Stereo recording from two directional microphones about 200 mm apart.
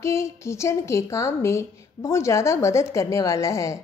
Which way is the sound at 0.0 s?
15° left (ahead or behind).